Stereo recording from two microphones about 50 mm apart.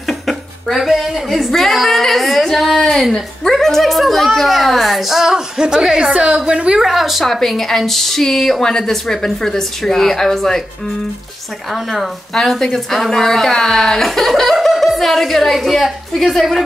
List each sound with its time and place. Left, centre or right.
0.3 s a sound: centre
3.1 s a woman's voice: centre; by 6.8 s right
6.8 s speech: centre
11.7 s a woman's voice: centre